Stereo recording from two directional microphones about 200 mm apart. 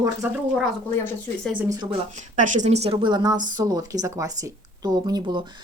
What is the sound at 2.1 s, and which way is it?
Speech, 40° right (ahead or behind).